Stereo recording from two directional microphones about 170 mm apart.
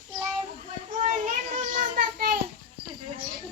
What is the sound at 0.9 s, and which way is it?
Child singing, 50° right (ahead or behind).